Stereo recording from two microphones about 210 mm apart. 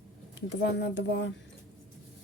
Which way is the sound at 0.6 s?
55° left (ahead or behind).